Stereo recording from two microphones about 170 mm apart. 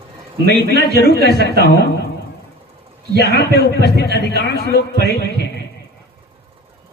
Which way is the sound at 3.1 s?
80° left.